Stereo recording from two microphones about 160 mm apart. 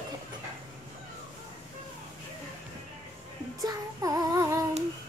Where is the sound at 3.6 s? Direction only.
20° right (ahead or behind).